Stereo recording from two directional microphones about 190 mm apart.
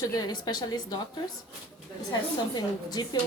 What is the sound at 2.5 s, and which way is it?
Speech, 20° left (ahead or behind).